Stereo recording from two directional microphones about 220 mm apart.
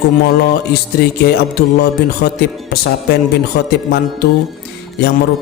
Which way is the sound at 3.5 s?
45° left (ahead or behind).